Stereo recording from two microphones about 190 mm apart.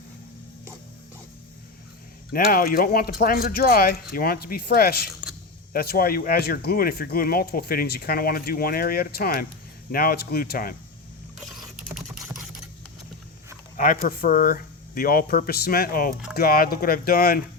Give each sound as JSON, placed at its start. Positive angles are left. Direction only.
{"t": 2.3, "sound": "speech", "side_deg": 50}
{"t": 11.3, "sound": "computer keyboard", "side_deg": 0}
{"t": 13.7, "sound": "speech", "side_deg": 45}